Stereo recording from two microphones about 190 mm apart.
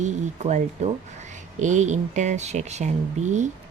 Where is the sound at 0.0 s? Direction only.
40° right (ahead or behind).